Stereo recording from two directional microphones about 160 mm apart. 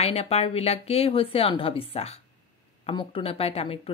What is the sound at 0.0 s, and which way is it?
Speech, 40° left (ahead or behind).